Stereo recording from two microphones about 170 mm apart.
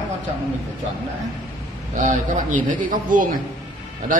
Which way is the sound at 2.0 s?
45° right (ahead or behind).